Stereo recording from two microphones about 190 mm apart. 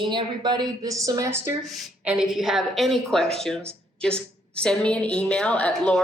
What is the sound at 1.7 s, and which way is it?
A woman's voice, 5° right (ahead or behind).